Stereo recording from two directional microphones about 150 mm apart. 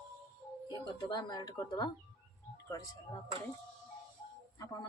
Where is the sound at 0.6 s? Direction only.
30° left (ahead or behind).